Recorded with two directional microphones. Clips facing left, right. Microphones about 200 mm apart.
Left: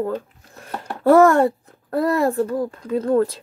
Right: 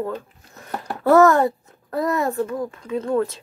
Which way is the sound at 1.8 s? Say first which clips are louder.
Left 3 dB; 30° left (ahead or behind).